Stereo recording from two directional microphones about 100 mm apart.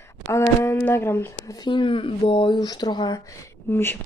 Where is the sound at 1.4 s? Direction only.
45° left (ahead or behind).